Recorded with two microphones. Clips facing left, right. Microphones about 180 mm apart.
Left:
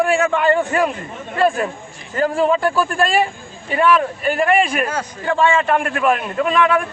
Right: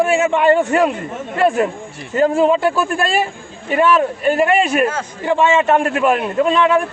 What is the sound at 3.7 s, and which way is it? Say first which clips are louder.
A man's voice: right 2 dB; 25° right (ahead or behind).